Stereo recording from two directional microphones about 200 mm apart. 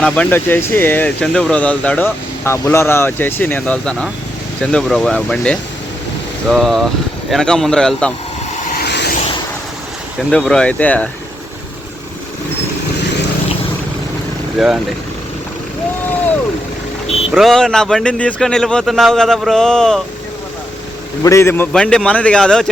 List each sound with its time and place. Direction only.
0.0 s speech: 10° left (ahead or behind)
8.5 s a sound: 45° left (ahead or behind)
10.3 s speech: 5° left (ahead or behind)
14.6 s speech: centre (ahead or behind)
17.3 s speech: centre (ahead or behind)
21.2 s speech: 15° left (ahead or behind)